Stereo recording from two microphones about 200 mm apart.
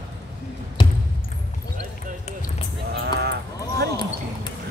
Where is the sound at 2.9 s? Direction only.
55° right (ahead or behind).